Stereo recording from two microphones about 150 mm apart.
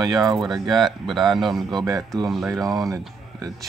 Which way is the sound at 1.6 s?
25° right (ahead or behind).